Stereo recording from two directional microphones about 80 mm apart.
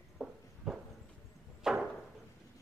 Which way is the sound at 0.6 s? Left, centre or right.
Centre.